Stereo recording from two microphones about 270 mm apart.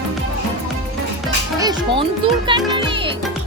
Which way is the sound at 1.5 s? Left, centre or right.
Centre.